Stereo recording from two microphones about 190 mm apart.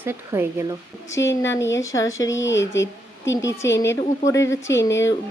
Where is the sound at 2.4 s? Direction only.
75° left (ahead or behind).